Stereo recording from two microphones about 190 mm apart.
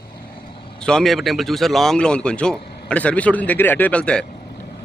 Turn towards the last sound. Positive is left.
turn(degrees=5)  # may be behind; listen again after turning